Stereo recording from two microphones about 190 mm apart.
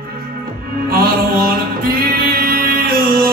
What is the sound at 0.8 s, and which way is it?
Music, 50° right (ahead or behind).